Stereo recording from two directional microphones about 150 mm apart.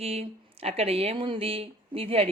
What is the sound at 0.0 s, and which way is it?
A woman's voice, 40° right (ahead or behind).